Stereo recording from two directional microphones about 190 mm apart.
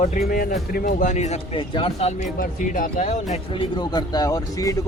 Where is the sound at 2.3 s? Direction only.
45° left (ahead or behind).